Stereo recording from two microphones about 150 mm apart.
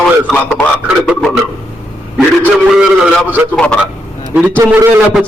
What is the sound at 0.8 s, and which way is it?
A man's voice, 5° right (ahead or behind).